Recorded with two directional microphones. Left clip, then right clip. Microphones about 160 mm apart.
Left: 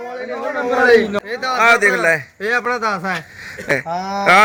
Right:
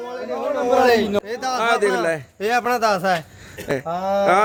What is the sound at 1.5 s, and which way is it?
Speech, 5° left (ahead or behind).